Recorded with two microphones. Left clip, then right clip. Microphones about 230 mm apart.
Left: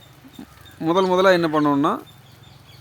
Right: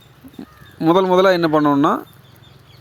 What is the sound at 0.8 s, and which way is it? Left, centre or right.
A man's voice, right.